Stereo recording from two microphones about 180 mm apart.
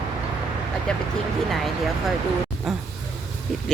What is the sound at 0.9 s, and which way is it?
Speech, 5° left (ahead or behind).